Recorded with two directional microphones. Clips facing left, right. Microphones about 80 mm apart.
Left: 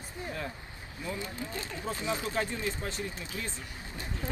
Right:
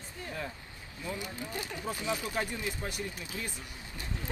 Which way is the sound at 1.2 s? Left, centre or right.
Centre.